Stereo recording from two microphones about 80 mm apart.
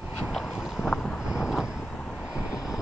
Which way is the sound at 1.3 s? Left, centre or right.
Centre.